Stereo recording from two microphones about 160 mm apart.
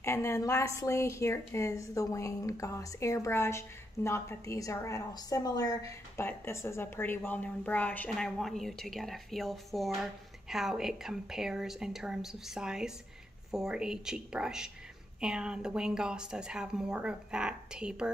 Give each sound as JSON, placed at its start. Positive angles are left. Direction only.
{"t": 0.0, "sound": "a woman's voice", "side_deg": 20}